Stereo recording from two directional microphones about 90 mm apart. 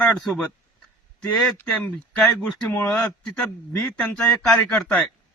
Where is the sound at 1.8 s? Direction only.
10° left (ahead or behind).